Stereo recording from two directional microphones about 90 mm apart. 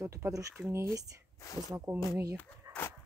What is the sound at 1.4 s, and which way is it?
Speech, 40° left (ahead or behind).